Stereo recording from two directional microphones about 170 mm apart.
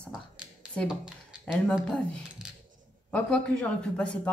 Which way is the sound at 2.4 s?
5° right (ahead or behind).